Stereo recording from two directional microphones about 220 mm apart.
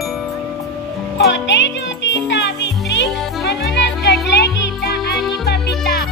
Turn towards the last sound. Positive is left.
turn(degrees=50)  # may be behind; listen again after turning